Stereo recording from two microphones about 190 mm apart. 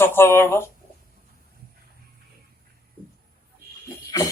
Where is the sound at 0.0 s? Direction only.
10° left (ahead or behind).